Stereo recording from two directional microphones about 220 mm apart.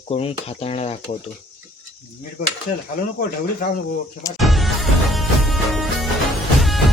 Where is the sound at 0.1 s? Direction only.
25° left (ahead or behind).